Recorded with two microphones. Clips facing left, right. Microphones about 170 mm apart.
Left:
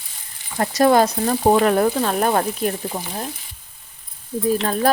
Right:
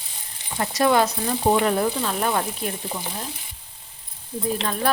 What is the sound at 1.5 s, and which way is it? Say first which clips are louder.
Speech: left 4 dB; 60° left (ahead or behind).